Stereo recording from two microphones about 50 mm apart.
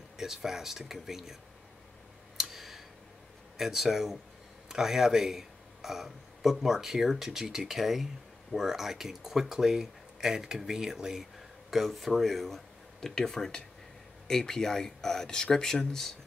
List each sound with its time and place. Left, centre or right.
0.2 s speech: centre
2.3 s clicking: centre
3.5 s speech: centre